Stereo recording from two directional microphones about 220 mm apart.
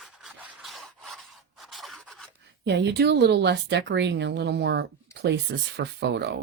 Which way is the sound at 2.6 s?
50° right (ahead or behind).